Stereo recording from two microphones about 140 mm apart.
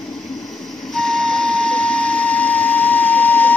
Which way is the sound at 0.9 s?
5° left (ahead or behind).